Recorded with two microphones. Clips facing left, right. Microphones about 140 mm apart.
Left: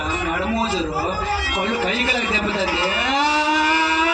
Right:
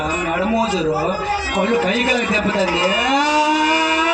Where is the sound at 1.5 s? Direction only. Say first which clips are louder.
Right 7 dB; 45° right (ahead or behind).